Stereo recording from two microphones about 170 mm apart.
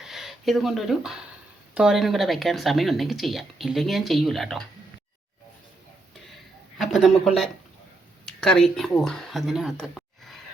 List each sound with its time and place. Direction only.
0.0 s a sound: centre (ahead or behind)
1.7 s speech: 5° right (ahead or behind)
6.7 s speech: centre (ahead or behind)